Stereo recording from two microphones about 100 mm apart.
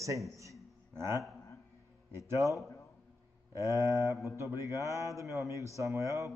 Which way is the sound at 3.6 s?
30° right (ahead or behind).